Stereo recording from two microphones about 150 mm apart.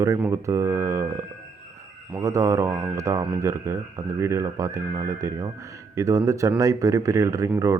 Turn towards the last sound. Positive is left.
turn(degrees=-20)  # may be behind; listen again after turning